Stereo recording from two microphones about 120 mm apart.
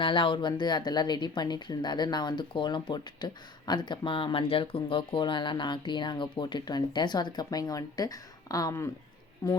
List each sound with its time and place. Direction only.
0.0 s speech: 45° left (ahead or behind); by 9.6 s 30° left (ahead or behind)